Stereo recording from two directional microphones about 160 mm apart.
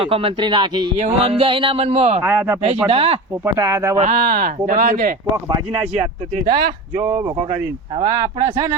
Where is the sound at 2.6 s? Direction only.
40° right (ahead or behind).